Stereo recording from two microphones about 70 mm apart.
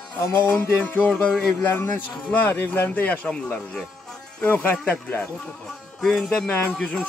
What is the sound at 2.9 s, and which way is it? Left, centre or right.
Speech, left.